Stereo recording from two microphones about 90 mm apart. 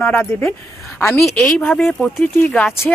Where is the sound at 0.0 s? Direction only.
25° left (ahead or behind).